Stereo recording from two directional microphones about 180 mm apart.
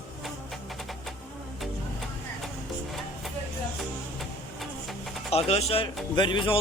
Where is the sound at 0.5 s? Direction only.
Centre (ahead or behind).